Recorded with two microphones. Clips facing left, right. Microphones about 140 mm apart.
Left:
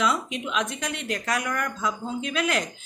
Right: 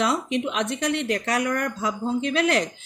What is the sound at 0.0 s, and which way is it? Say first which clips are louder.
Speech: right 3 dB; 60° right (ahead or behind).